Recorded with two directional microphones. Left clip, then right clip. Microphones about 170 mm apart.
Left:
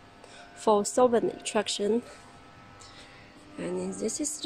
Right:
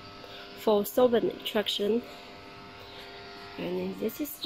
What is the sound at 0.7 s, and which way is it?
Speech, 5° left (ahead or behind).